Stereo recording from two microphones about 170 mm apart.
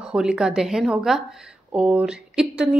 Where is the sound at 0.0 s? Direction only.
5° right (ahead or behind).